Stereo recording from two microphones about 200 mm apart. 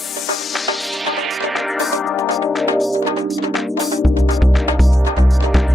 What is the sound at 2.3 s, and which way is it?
Music, centre (ahead or behind).